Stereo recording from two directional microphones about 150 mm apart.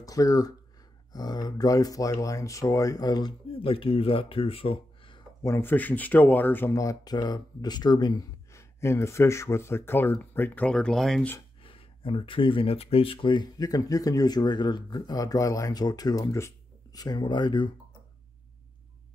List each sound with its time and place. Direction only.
0.0 s speech: 25° left (ahead or behind)
5.4 s speech: 15° left (ahead or behind)
11.6 s speech: 35° left (ahead or behind)